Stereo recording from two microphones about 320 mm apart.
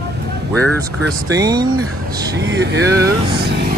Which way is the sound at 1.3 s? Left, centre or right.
Centre.